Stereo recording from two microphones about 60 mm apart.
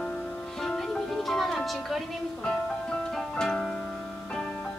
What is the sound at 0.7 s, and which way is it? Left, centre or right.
Music, centre.